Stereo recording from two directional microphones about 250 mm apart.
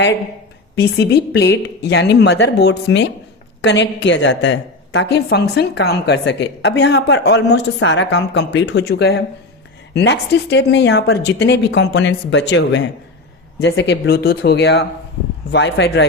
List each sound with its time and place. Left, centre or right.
0.8 s a woman's voice: left